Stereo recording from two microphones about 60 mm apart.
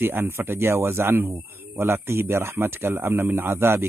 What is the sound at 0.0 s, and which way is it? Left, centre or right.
A man's voice, right.